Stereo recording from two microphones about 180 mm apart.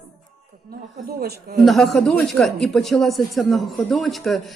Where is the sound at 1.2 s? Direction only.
60° right (ahead or behind).